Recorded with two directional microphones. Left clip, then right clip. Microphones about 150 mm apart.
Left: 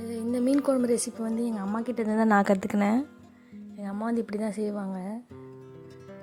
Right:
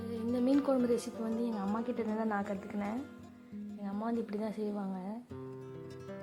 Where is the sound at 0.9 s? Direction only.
35° left (ahead or behind).